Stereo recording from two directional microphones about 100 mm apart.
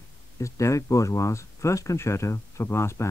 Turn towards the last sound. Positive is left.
turn(degrees=25)  # may be behind; listen again after turning